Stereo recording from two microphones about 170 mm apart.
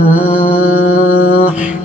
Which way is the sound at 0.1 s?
10° right (ahead or behind).